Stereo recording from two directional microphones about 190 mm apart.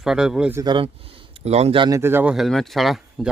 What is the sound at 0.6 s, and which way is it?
Speech, 25° right (ahead or behind).